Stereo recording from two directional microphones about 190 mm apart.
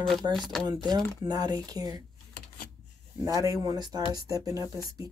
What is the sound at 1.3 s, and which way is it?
Speech, 20° right (ahead or behind).